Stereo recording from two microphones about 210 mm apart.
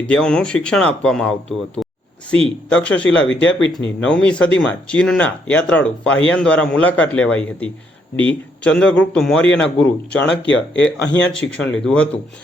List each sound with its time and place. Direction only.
0.0 s speech: 5° left (ahead or behind)
2.6 s speech: 5° left (ahead or behind)
3.2 s speech: 65° left (ahead or behind)
4.0 s speech: 5° left (ahead or behind)
10.4 s speech: 60° left (ahead or behind)
11.3 s speech: 5° left (ahead or behind)